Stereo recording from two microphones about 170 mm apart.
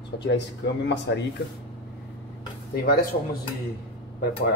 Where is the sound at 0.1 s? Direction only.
75° left (ahead or behind).